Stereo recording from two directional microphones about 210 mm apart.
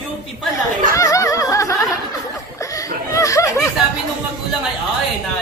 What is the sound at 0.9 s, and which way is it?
Speech, 15° left (ahead or behind).